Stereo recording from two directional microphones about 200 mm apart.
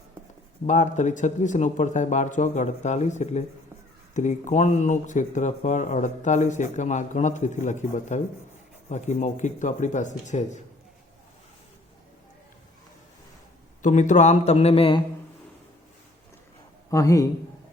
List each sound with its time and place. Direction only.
0.7 s speech: 35° left (ahead or behind)
13.8 s speech: 40° left (ahead or behind)
16.9 s a man's voice: 15° left (ahead or behind)